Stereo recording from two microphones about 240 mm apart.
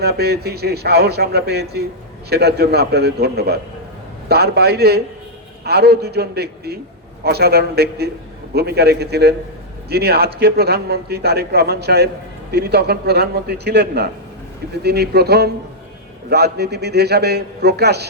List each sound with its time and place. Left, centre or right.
0.0 s a man's voice: right